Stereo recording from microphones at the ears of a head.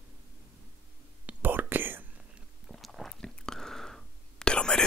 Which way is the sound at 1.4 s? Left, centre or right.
Right.